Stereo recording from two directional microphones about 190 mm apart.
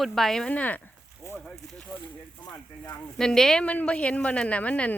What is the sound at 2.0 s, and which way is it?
Speech, 20° left (ahead or behind).